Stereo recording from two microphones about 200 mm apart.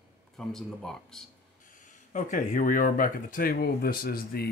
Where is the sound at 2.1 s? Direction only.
40° left (ahead or behind).